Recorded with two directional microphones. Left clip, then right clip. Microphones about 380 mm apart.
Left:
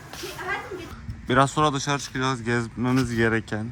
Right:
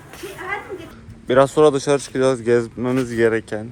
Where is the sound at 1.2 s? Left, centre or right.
Centre.